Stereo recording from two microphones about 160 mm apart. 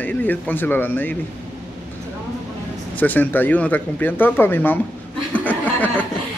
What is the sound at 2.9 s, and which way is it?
Speech, 10° left (ahead or behind).